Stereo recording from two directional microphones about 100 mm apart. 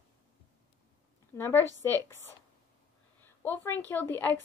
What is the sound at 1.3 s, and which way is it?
Speech, 25° left (ahead or behind).